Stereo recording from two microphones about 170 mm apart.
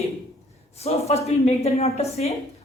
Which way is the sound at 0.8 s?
35° left (ahead or behind).